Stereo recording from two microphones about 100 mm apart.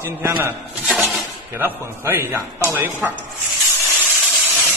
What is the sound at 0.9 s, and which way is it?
Dishes, centre (ahead or behind).